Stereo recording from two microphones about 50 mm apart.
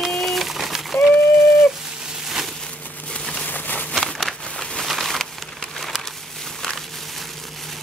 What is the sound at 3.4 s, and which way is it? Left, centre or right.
Insect, left.